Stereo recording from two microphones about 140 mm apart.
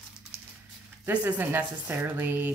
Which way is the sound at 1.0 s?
10° right (ahead or behind).